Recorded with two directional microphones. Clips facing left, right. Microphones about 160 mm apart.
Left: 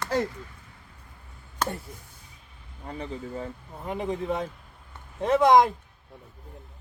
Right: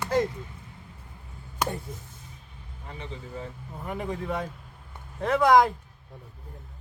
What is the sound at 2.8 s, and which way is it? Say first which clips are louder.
Speech: left 5 dB; 40° left (ahead or behind).